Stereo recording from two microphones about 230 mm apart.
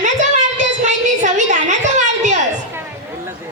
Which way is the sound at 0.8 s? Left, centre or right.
Right.